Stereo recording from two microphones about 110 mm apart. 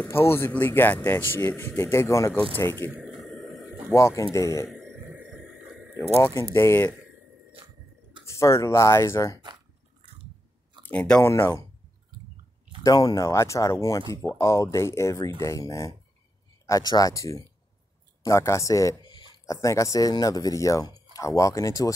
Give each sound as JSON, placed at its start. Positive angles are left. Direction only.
{"t": 0.0, "sound": "speech", "side_deg": 20}
{"t": 2.9, "sound": "a sound", "side_deg": -5}
{"t": 3.9, "sound": "speech", "side_deg": 25}
{"t": 4.6, "sound": "a sound", "side_deg": -5}
{"t": 6.5, "sound": "speech", "side_deg": 20}
{"t": 8.3, "sound": "speech", "side_deg": 25}
{"t": 10.9, "sound": "speech", "side_deg": 10}
{"t": 11.2, "sound": "speech", "side_deg": 20}
{"t": 12.8, "sound": "speech", "side_deg": 35}
{"t": 19.0, "sound": "a sound", "side_deg": 45}
{"t": 19.4, "sound": "speech", "side_deg": 30}